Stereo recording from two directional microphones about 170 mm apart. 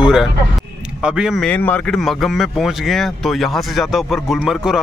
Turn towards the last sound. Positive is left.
turn(degrees=-5)  # may be behind; listen again after turning